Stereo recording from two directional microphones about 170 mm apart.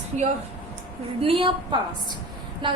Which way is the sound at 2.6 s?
30° right (ahead or behind).